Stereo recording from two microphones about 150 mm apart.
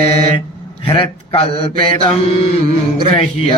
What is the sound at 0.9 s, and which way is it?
Mantra, 35° left (ahead or behind).